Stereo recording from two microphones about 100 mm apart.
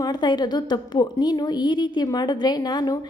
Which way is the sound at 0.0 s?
45° left (ahead or behind).